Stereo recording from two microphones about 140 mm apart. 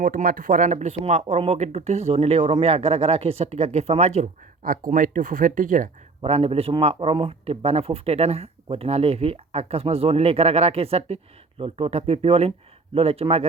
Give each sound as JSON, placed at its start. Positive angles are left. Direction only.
{"t": 0.0, "sound": "speech", "side_deg": -90}
{"t": 4.9, "sound": "speech", "side_deg": -75}
{"t": 6.2, "sound": "speech", "side_deg": -45}